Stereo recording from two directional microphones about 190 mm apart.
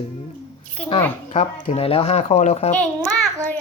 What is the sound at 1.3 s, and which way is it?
Speech, 35° left (ahead or behind).